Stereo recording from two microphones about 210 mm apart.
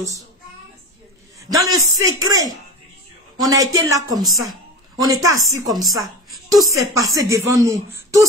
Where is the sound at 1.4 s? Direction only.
15° right (ahead or behind).